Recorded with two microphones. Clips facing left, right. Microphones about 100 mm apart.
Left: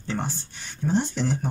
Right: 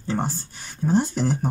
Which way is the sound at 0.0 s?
35° right (ahead or behind).